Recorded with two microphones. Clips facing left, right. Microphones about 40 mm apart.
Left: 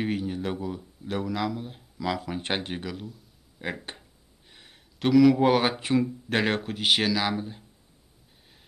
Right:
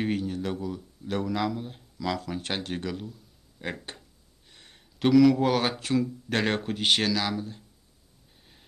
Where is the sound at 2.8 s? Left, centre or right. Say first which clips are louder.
Right 2 dB; centre; by 6.4 s left.